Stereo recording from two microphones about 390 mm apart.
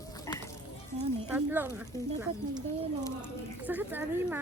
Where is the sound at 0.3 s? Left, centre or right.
Centre.